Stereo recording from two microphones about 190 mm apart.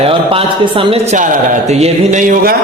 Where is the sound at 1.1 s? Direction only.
40° right (ahead or behind).